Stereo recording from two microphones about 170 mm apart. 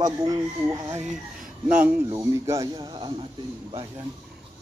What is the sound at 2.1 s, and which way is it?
Speech, 15° right (ahead or behind).